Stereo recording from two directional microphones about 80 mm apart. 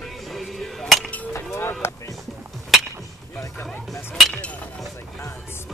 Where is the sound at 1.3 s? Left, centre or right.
Left.